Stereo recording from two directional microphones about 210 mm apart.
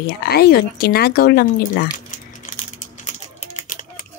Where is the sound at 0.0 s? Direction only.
45° left (ahead or behind).